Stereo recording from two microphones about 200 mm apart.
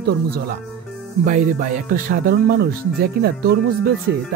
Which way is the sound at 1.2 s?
40° right (ahead or behind).